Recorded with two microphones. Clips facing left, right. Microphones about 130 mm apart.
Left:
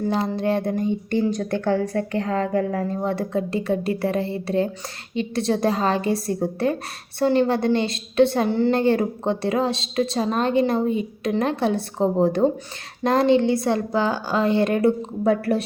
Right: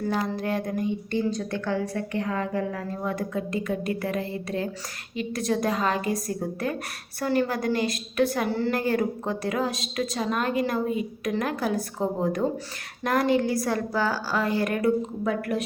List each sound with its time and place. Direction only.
0.0 s a woman's voice: 25° left (ahead or behind)
1.6 s a woman's voice: 50° left (ahead or behind)
2.2 s a woman's voice: 65° left (ahead or behind); by 2.8 s 50° left (ahead or behind)
3.0 s a woman's voice: 30° left (ahead or behind)